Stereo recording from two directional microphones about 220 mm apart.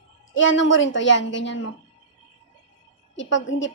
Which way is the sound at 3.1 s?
55° left (ahead or behind).